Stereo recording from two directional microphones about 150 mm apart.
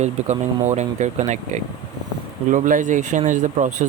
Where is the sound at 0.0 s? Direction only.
50° right (ahead or behind).